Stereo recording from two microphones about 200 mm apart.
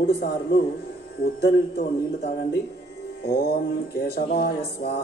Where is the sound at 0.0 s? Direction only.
50° left (ahead or behind).